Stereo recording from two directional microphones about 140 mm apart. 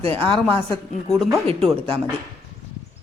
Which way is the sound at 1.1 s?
Centre (ahead or behind).